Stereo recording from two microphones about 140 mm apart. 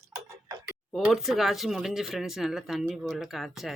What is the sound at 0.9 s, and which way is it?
Speech, centre (ahead or behind).